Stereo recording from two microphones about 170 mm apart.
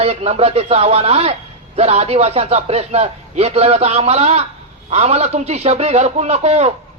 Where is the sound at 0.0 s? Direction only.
35° right (ahead or behind).